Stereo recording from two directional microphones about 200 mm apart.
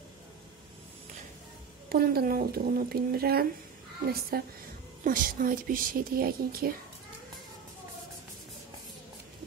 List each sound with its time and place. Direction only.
1.9 s a woman's voice: 50° right (ahead or behind)